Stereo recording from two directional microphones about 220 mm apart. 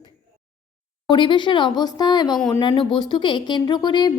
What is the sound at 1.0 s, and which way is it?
A woman's voice, 20° left (ahead or behind).